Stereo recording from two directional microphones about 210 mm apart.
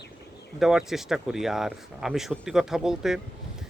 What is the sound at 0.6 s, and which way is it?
Speech, centre (ahead or behind).